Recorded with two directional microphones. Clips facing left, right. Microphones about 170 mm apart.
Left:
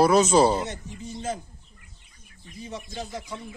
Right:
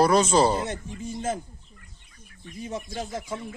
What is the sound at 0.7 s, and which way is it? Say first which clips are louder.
Speech: right 3 dB; 50° right (ahead or behind).